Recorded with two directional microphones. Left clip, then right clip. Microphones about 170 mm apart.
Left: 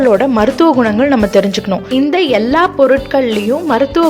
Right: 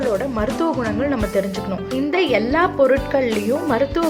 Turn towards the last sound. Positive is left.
turn(degrees=25)  # may be behind; listen again after turning